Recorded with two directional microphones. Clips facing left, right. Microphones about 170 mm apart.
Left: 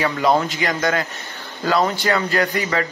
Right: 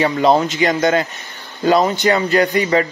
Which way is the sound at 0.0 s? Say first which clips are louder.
Right 4 dB; 25° right (ahead or behind).